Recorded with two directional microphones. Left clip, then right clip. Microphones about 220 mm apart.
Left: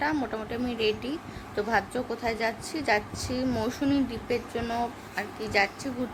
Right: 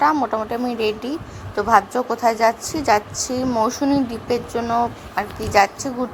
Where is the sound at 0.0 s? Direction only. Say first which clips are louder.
Right 11 dB; 15° right (ahead or behind).